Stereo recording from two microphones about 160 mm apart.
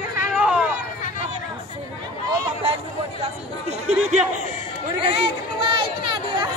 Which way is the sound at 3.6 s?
45° right (ahead or behind).